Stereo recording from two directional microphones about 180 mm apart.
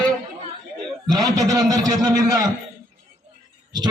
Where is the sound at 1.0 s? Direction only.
20° right (ahead or behind).